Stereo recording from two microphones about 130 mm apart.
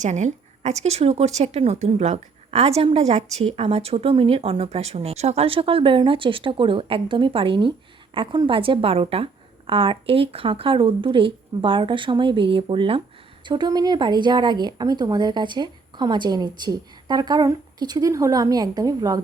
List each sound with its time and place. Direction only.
0.0 s a woman's voice: 65° right (ahead or behind); by 19.2 s 30° right (ahead or behind)